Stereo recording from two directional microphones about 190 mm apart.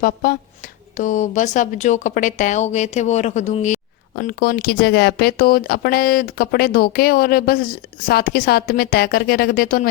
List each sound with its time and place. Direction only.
0.0 s speech: 55° left (ahead or behind)
0.9 s a woman's voice: 40° left (ahead or behind)
4.1 s speech: 50° left (ahead or behind)